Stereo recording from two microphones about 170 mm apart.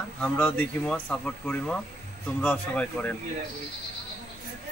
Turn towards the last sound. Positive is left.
turn(degrees=5)  # may be behind; listen again after turning